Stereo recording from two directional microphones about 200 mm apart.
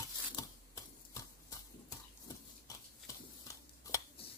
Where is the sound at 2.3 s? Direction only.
15° left (ahead or behind).